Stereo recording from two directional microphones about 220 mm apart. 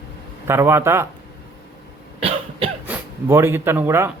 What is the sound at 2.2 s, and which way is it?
Cough, 25° right (ahead or behind).